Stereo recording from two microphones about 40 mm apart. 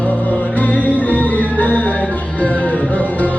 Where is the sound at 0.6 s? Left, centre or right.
Left.